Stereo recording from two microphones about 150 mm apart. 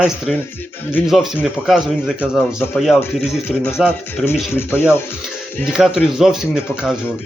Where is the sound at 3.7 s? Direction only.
5° right (ahead or behind).